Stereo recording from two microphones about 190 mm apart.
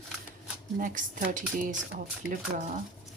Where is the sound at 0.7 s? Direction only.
45° right (ahead or behind).